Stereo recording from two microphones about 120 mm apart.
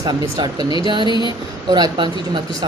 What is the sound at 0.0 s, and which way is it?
Speech, 35° right (ahead or behind).